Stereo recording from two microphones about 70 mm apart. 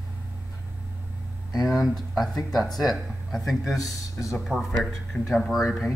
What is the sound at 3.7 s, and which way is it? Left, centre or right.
Speech, left.